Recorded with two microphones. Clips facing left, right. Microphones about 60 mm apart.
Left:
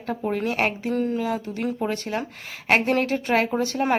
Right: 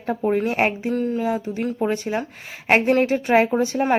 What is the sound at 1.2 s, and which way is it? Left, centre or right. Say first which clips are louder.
A woman's voice: right 3 dB; centre.